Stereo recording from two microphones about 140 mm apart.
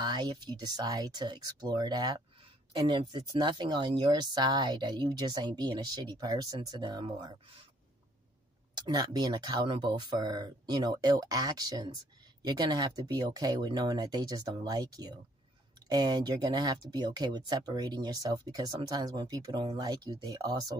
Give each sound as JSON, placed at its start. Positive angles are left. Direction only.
{"t": 0.0, "sound": "speech", "side_deg": -30}
{"t": 8.7, "sound": "speech", "side_deg": -35}